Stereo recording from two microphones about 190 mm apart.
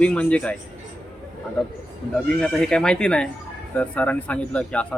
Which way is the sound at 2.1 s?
5° left (ahead or behind).